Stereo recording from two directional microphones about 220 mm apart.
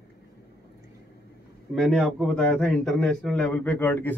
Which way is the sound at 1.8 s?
Centre (ahead or behind).